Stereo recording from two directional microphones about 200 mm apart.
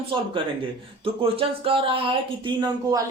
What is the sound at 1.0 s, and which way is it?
Speech, 30° right (ahead or behind).